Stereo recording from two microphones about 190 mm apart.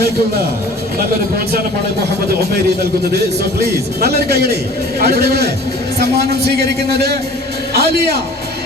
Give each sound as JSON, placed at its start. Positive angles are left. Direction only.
{"t": 4.0, "sound": "a man's voice", "side_deg": -55}